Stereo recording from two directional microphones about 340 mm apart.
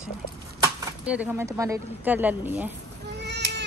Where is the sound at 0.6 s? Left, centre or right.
Centre.